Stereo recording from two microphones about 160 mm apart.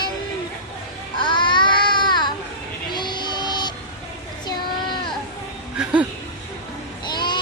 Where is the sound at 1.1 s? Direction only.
30° left (ahead or behind).